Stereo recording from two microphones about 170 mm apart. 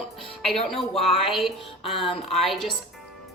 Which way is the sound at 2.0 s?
35° left (ahead or behind).